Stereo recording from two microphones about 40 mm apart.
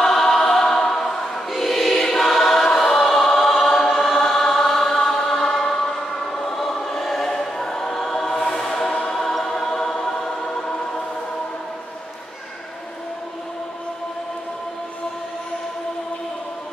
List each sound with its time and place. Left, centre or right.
0.0 s choir: centre
7.2 s choir: centre